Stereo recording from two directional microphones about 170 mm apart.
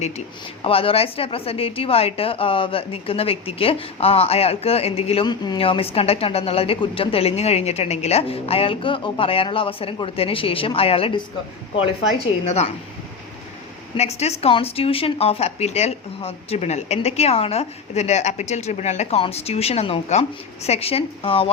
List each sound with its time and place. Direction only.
0.6 s a woman's voice: 35° left (ahead or behind)
13.9 s a woman's voice: 40° left (ahead or behind)